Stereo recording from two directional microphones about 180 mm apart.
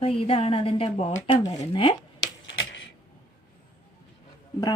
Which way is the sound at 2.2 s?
90° left.